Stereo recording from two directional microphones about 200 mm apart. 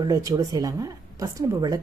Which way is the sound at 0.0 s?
15° right (ahead or behind).